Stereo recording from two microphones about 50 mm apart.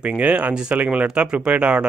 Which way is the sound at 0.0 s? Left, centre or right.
Right.